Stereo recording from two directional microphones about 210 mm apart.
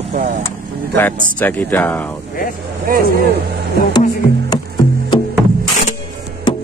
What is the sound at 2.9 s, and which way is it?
Speech, 45° right (ahead or behind).